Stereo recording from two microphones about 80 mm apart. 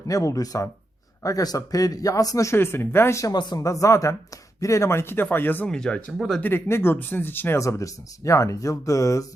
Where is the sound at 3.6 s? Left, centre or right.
Left.